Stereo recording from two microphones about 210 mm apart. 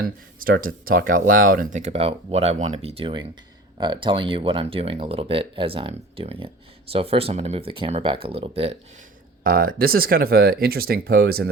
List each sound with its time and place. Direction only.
0.0 s speech: 45° right (ahead or behind); by 8.8 s 30° right (ahead or behind)
9.4 s speech: 45° right (ahead or behind)